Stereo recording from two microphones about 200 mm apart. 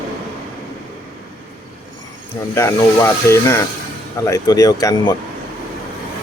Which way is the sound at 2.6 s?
15° left (ahead or behind).